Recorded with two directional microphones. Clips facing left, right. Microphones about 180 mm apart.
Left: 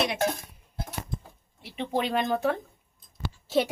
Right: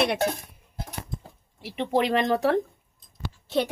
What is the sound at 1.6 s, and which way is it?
Speech, 80° right.